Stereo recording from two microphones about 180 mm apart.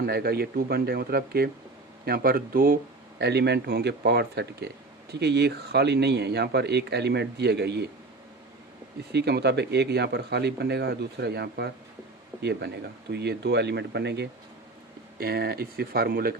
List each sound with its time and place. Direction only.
0.0 s speech: 60° right (ahead or behind)
3.2 s speech: 65° right (ahead or behind)
9.1 s speech: 65° right (ahead or behind)